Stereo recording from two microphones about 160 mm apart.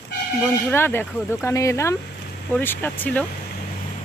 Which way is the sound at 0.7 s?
15° left (ahead or behind).